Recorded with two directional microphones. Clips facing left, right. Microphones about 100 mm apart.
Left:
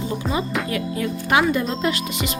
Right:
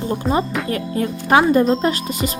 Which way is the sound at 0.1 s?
40° right (ahead or behind).